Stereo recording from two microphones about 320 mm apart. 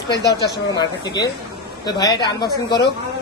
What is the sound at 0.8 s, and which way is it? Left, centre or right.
A man's voice, centre.